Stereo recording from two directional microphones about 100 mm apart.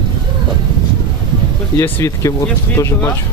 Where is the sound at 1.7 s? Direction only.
25° left (ahead or behind).